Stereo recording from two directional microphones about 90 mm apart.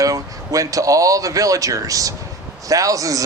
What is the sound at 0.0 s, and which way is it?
Speech, 40° right (ahead or behind).